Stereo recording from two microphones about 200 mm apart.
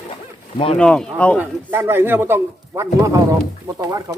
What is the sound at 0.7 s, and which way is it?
Speech, 5° left (ahead or behind).